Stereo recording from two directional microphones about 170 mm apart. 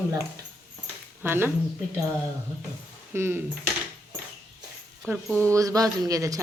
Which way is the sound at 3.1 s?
15° right (ahead or behind).